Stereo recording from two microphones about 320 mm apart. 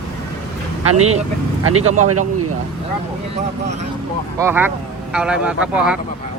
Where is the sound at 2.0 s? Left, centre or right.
Right.